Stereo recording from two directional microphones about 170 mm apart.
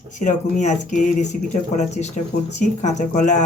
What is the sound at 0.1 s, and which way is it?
Speech, 45° left (ahead or behind).